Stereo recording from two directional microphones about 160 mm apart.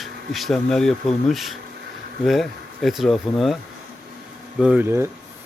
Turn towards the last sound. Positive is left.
turn(degrees=-15)  # may be behind; listen again after turning